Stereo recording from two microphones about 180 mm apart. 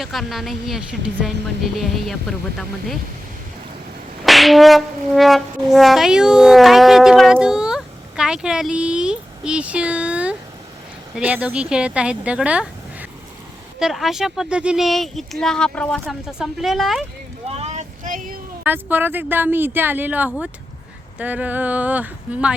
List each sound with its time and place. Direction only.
0.0 s speech: centre (ahead or behind)
4.3 s brass instrument: centre (ahead or behind)
11.1 s speech: 10° right (ahead or behind)
17.5 s vehicle: 35° right (ahead or behind)
18.6 s speech: 10° right (ahead or behind)